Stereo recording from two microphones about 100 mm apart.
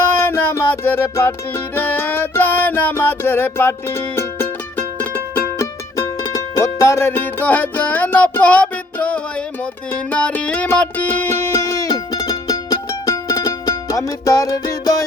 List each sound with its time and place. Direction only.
0.3 s music: 25° left (ahead or behind)
5.5 s music: 35° left (ahead or behind)